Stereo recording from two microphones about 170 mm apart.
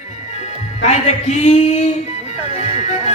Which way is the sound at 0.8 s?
40° left (ahead or behind).